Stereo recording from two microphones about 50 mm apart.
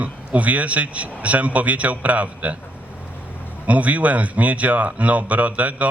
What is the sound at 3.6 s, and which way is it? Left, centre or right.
A man's voice, right.